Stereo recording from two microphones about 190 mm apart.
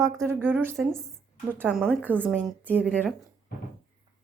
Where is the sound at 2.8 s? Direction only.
5° left (ahead or behind).